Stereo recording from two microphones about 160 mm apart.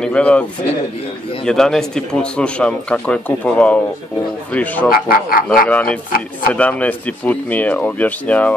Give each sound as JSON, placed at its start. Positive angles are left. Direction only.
{"t": 0.0, "sound": "speech", "side_deg": 5}
{"t": 4.8, "sound": "speech", "side_deg": 65}
{"t": 5.7, "sound": "speech", "side_deg": 5}